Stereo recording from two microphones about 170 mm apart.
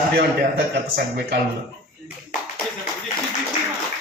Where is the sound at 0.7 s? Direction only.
75° right (ahead or behind).